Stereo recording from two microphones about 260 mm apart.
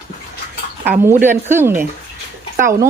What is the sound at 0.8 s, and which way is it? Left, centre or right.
Speech, centre.